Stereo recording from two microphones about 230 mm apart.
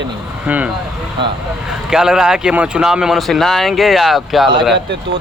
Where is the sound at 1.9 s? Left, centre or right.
Centre.